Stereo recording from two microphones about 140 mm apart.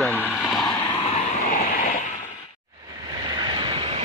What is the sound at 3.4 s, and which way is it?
Vehicle, 35° right (ahead or behind).